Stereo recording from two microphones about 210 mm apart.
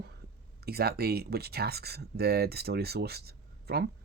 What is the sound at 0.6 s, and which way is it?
Speech, 50° right (ahead or behind).